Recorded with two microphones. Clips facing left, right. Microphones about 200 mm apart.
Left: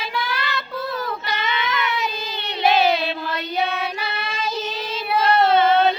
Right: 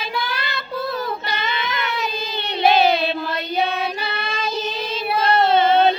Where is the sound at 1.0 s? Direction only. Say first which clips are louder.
Right 1 dB; 30° right (ahead or behind).